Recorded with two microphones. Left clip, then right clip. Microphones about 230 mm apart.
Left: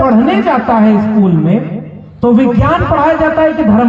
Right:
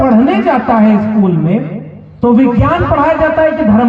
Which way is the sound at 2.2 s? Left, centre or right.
Left.